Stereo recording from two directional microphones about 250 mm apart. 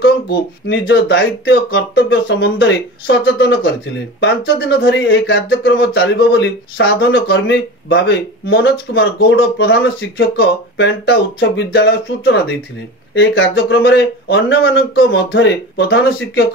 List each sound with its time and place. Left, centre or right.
0.0 s speech: left
4.6 s speech: left